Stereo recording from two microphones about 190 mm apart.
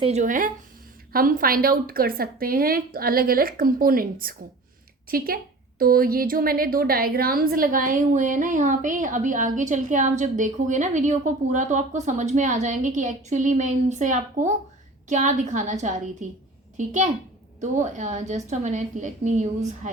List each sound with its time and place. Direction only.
0.0 s a woman's voice: 35° right (ahead or behind)